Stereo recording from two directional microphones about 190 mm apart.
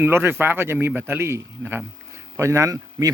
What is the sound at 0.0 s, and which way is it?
Speech, 10° right (ahead or behind).